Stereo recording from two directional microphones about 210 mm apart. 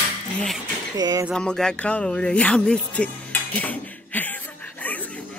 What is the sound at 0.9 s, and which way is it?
Speech, 20° right (ahead or behind).